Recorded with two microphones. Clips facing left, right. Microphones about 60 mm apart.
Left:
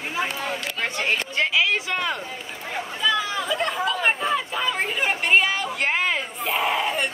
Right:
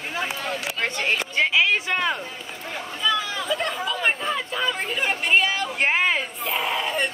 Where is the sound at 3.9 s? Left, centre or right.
Centre.